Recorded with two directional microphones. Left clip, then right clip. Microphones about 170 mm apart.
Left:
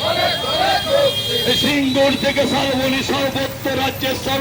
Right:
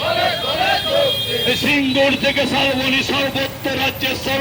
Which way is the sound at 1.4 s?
10° right (ahead or behind).